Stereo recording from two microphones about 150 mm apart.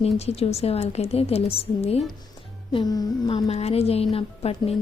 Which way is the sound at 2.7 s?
30° left (ahead or behind).